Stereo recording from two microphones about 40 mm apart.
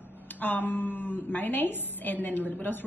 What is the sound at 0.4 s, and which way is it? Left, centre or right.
A woman's voice, left.